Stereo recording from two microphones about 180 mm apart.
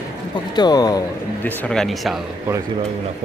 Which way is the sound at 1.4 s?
5° left (ahead or behind).